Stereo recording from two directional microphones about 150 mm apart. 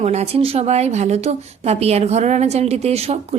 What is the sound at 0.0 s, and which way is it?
A woman's voice, 45° right (ahead or behind).